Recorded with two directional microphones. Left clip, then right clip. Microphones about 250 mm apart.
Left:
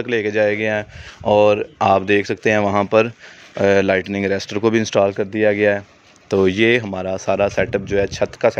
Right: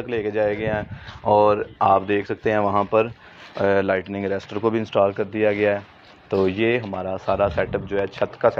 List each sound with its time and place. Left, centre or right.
0.0 s speech: left